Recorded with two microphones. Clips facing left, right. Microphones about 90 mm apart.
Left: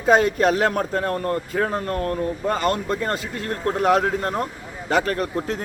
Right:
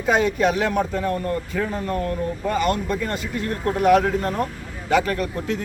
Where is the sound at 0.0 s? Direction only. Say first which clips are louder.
Left 2 dB; 40° left (ahead or behind).